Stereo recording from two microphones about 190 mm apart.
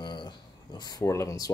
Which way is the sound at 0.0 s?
25° left (ahead or behind).